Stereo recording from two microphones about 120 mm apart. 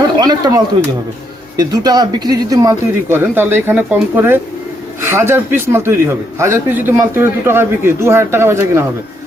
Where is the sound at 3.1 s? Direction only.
15° right (ahead or behind).